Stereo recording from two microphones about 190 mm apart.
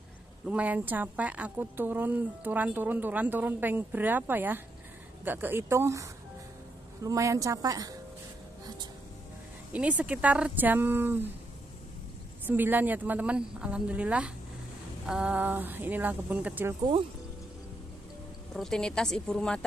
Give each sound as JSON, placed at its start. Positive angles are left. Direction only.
{"t": 0.5, "sound": "a woman's voice", "side_deg": -5}
{"t": 9.7, "sound": "a woman's voice", "side_deg": -5}
{"t": 12.4, "sound": "a woman's voice", "side_deg": -10}
{"t": 18.5, "sound": "speech", "side_deg": 0}